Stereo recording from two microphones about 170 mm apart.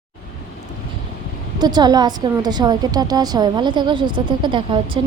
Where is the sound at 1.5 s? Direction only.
25° right (ahead or behind).